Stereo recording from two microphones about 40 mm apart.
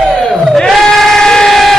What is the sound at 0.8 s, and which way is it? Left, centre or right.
Train, centre.